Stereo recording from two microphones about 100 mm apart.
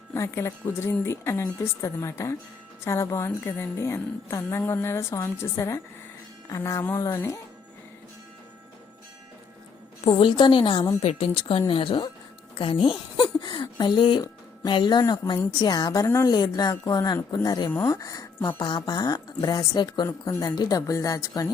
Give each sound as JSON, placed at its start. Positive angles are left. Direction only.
{"t": 0.1, "sound": "a woman's voice", "side_deg": 30}
{"t": 10.2, "sound": "a woman's voice", "side_deg": 50}
{"t": 11.0, "sound": "a woman's voice", "side_deg": 75}
{"t": 12.5, "sound": "a sound", "side_deg": 60}
{"t": 14.2, "sound": "speech", "side_deg": 45}
{"t": 16.0, "sound": "a woman's voice", "side_deg": 30}
{"t": 16.3, "sound": "speech", "side_deg": 40}
{"t": 18.6, "sound": "speech", "side_deg": 45}